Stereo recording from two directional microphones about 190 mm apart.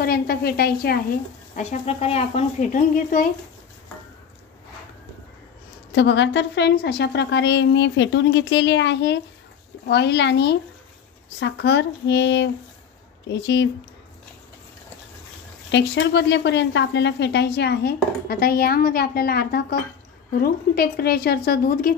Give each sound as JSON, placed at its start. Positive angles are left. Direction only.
{"t": 0.0, "sound": "a woman's voice", "side_deg": 55}
{"t": 1.5, "sound": "speech", "side_deg": 35}
{"t": 5.9, "sound": "a woman's voice", "side_deg": 70}
{"t": 15.7, "sound": "a woman's voice", "side_deg": 65}